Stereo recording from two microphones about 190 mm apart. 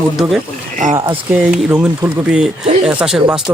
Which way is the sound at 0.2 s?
Centre (ahead or behind).